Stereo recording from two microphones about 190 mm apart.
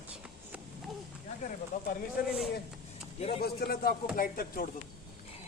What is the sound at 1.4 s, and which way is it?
Speech, 45° left (ahead or behind).